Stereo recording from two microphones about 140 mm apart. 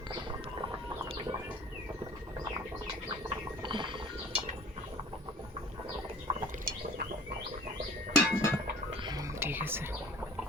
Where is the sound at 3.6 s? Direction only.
35° right (ahead or behind).